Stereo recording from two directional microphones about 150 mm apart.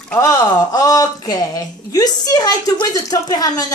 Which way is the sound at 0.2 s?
20° left (ahead or behind).